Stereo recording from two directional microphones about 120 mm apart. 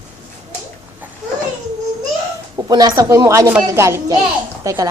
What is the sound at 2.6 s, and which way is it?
A woman's voice, 35° right (ahead or behind).